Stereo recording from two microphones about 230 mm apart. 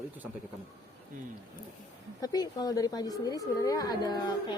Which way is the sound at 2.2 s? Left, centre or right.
Centre.